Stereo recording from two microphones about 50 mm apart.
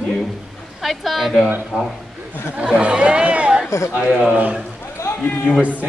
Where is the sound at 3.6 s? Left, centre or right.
Left.